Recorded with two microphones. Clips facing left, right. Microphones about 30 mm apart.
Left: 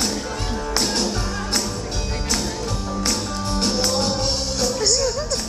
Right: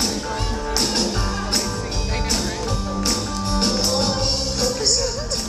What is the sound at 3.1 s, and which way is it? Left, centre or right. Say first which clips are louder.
Music: right 1 dB; centre.